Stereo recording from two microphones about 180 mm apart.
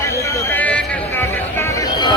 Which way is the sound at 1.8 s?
25° left (ahead or behind).